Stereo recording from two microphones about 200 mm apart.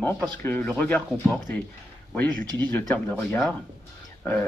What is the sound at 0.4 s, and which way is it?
A man's voice, 10° left (ahead or behind).